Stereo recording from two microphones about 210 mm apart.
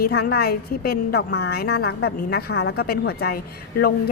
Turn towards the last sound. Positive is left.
turn(degrees=45)  # may be behind; listen again after turning